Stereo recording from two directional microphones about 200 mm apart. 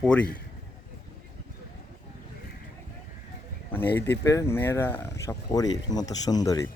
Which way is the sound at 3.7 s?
10° left (ahead or behind).